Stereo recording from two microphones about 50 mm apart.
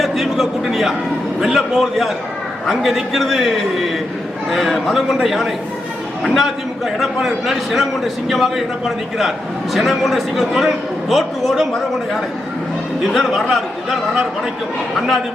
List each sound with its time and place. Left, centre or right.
0.0 s a sound: centre
1.4 s a man's voice: centre
9.7 s a man's voice: centre
13.1 s a man's voice: centre